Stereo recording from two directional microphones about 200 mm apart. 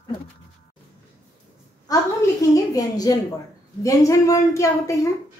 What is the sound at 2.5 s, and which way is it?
A woman's voice, 20° left (ahead or behind).